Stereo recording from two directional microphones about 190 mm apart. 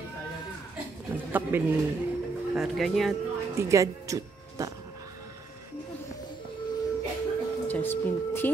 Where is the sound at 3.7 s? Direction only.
15° right (ahead or behind).